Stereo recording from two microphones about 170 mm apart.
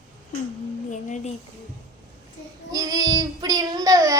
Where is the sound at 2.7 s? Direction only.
20° right (ahead or behind).